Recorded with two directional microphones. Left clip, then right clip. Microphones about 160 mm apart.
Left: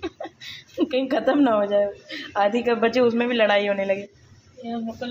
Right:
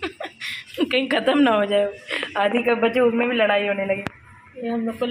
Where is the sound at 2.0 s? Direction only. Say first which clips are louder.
Right 1 dB; 5° left (ahead or behind).